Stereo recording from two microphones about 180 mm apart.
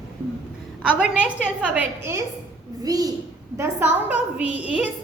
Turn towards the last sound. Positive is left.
turn(degrees=-5)  # may be behind; listen again after turning